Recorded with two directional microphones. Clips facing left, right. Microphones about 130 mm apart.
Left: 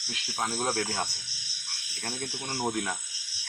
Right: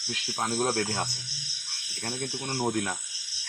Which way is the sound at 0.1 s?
Centre (ahead or behind).